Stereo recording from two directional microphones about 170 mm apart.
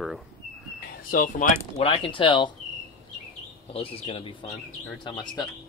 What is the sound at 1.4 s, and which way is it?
Speech, 50° left (ahead or behind).